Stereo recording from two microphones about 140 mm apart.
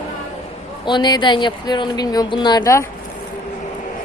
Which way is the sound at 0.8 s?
30° left (ahead or behind).